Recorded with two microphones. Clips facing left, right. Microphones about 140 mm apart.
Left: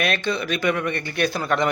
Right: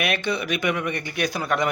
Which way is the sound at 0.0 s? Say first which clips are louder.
Left 1 dB; 15° right (ahead or behind).